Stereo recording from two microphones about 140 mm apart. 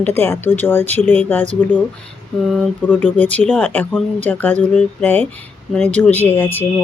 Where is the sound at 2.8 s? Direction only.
10° left (ahead or behind).